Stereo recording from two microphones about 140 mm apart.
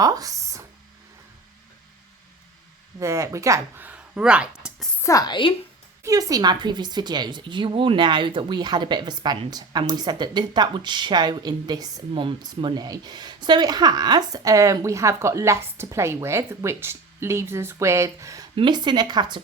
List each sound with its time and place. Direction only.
0.0 s a sound: 25° right (ahead or behind)
3.0 s speech: 20° right (ahead or behind)
3.8 s a sound: 10° right (ahead or behind)
5.0 s a woman's voice: 25° left (ahead or behind)
6.0 s speech: 25° right (ahead or behind)
18.5 s speech: 35° right (ahead or behind)